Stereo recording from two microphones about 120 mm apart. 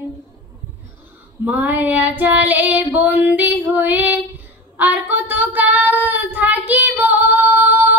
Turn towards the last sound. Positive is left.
turn(degrees=-15)  # may be behind; listen again after turning